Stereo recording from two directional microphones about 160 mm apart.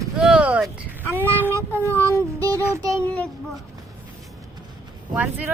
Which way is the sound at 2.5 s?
20° right (ahead or behind).